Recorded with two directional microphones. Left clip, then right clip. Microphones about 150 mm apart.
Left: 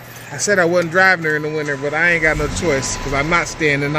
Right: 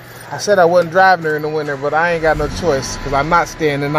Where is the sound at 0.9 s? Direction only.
15° left (ahead or behind).